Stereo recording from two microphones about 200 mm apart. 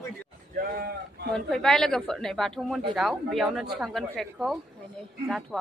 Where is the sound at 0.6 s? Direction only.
45° right (ahead or behind).